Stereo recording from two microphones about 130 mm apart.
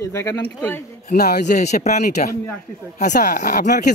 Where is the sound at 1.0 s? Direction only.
65° left (ahead or behind).